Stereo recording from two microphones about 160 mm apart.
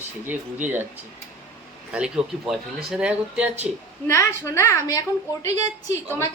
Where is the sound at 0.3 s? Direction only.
10° right (ahead or behind).